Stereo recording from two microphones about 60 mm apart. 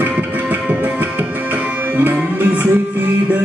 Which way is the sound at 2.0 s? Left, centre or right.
Right.